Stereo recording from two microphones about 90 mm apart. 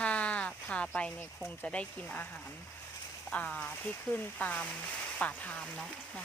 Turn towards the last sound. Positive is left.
turn(degrees=15)  # may be behind; listen again after turning